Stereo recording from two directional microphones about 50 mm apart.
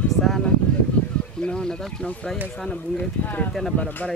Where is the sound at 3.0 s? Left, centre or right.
Left.